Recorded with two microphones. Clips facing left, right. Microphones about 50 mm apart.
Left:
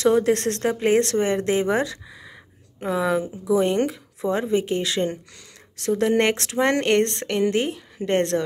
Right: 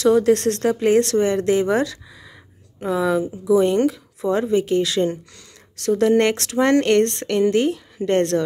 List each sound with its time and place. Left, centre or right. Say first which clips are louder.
0.0 s speech: right 3 dB; left